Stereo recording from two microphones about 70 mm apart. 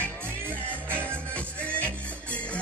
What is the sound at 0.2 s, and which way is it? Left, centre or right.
Music, right.